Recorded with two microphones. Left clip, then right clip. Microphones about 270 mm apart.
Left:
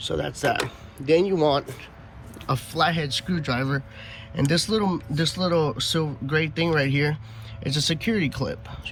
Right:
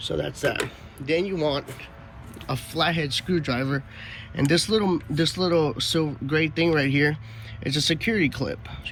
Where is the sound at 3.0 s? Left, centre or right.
Centre.